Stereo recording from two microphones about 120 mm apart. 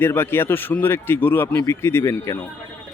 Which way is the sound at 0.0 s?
20° left (ahead or behind).